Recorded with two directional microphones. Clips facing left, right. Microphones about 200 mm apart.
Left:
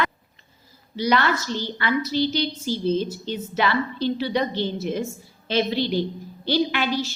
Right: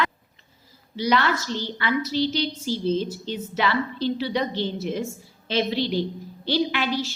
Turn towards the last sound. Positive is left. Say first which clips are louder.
# left 1 dB
turn(degrees=50)  # may be behind; listen again after turning